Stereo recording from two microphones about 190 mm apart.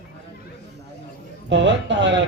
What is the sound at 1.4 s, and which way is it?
Speech, 70° right (ahead or behind).